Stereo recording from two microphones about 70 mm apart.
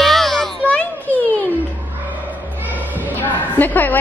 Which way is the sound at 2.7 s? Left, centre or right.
Right.